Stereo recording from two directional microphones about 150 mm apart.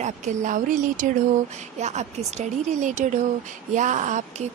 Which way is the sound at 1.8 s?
50° right (ahead or behind).